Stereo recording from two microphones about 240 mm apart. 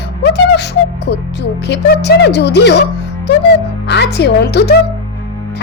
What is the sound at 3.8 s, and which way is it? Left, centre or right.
Speech, left.